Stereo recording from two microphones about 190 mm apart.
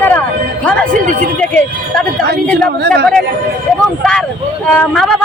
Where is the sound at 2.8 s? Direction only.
60° right (ahead or behind).